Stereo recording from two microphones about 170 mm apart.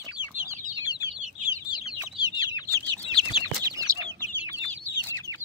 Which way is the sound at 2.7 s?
10° left (ahead or behind).